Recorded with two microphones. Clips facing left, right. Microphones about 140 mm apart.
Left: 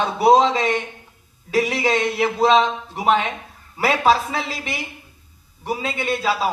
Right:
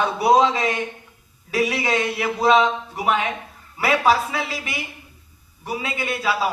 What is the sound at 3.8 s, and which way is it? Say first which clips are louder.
A man's voice: left 1 dB; 25° left (ahead or behind).